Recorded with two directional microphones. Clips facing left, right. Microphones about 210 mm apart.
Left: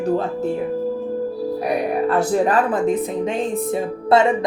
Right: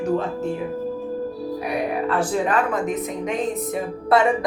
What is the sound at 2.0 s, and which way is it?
Speech, 35° left (ahead or behind).